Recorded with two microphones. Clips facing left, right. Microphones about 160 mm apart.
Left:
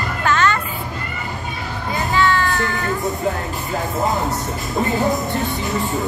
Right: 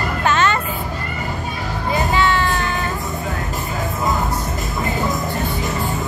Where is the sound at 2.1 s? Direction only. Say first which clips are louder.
Left 4 dB; 20° right (ahead or behind).